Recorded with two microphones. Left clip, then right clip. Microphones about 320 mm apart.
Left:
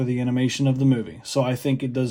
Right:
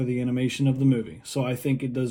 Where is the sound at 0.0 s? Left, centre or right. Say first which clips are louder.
Left 3 dB; left.